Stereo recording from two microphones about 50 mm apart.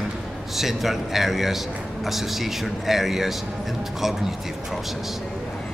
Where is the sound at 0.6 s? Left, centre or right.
Centre.